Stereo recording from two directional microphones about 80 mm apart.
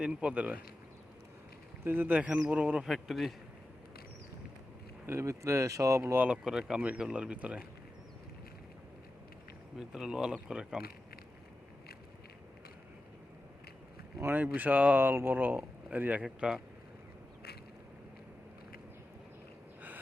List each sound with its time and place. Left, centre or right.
0.0 s speech: centre
1.8 s speech: right
2.8 s speech: centre
5.0 s speech: right
6.1 s speech: centre
9.7 s speech: centre
14.2 s speech: right
16.2 s speech: centre